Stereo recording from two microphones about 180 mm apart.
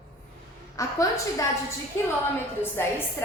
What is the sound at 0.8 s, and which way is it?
Speech, 15° left (ahead or behind).